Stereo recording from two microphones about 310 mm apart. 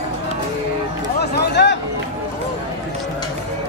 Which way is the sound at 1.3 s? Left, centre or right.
Left.